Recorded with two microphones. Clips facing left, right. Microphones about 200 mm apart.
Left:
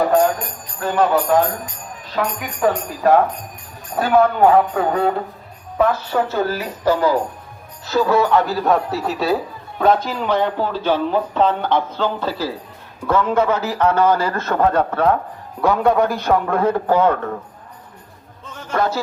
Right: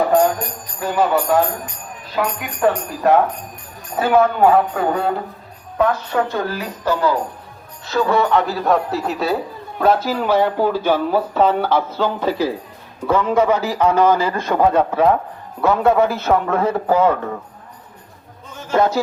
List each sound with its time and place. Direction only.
0.8 s a man's voice: centre (ahead or behind)
18.7 s speech: 20° right (ahead or behind)